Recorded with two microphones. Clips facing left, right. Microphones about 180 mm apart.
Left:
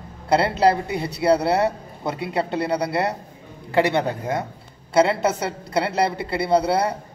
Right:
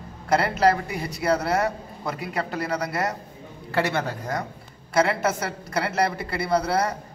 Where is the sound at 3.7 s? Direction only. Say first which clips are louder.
Left 5 dB; 15° left (ahead or behind).